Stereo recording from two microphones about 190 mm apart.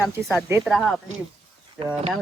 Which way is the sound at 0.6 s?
Centre (ahead or behind).